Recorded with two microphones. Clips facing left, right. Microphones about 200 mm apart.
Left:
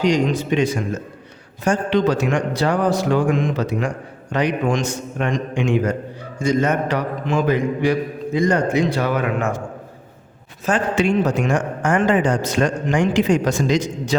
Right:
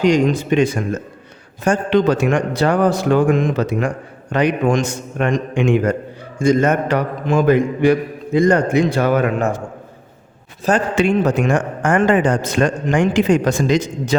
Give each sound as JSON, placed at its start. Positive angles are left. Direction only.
{"t": 0.0, "sound": "a man's voice", "side_deg": -50}
{"t": 10.7, "sound": "a man's voice", "side_deg": -55}